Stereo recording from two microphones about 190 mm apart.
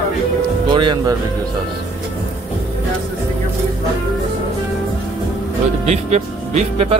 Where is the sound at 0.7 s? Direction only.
25° right (ahead or behind).